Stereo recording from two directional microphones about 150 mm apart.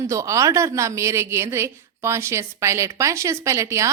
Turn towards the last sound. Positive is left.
turn(degrees=-20)  # may be behind; listen again after turning